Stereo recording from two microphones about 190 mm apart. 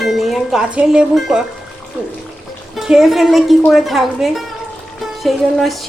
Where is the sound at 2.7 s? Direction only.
Centre (ahead or behind).